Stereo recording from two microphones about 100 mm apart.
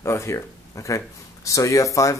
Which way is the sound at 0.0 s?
25° left (ahead or behind).